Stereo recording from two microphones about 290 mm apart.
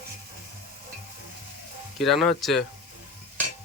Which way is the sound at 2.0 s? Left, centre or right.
Centre.